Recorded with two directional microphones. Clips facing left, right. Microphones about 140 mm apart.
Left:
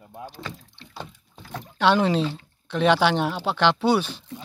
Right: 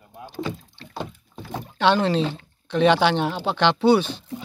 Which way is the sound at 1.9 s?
5° left (ahead or behind).